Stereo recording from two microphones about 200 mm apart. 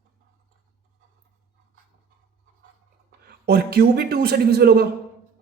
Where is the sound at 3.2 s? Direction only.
50° right (ahead or behind).